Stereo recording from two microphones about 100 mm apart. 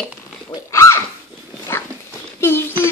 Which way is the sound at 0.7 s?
30° left (ahead or behind).